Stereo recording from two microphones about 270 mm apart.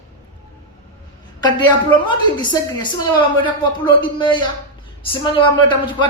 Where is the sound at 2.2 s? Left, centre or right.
Centre.